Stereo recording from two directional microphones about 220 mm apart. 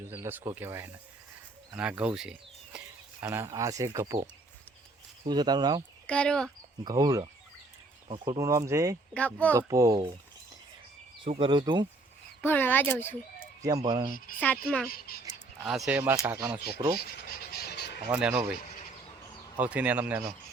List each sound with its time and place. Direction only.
0.0 s speech: 10° right (ahead or behind)
6.1 s speech: 5° left (ahead or behind)
6.8 s speech: 15° right (ahead or behind)
9.1 s speech: 5° left (ahead or behind)
9.6 s speech: 15° right (ahead or behind)
11.3 s speech: 25° right (ahead or behind)
12.4 s speech: 10° left (ahead or behind)
13.6 s speech: 15° right (ahead or behind)
14.3 s speech: 5° left (ahead or behind)
14.8 s speech: 45° left (ahead or behind)
15.6 s speech: centre (ahead or behind)
17.0 s scratch: 45° left (ahead or behind)
18.1 s speech: 5° right (ahead or behind)
19.5 s speech: 5° right (ahead or behind)